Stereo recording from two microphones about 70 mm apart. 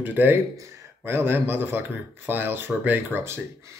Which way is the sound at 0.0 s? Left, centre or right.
Right.